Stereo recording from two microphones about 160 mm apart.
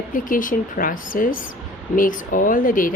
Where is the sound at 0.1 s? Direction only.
55° left (ahead or behind).